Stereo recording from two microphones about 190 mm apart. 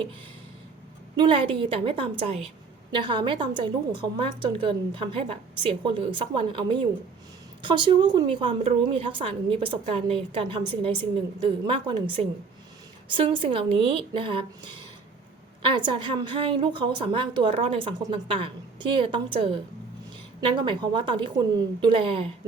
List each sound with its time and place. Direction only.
1.1 s a woman's voice: 25° right (ahead or behind)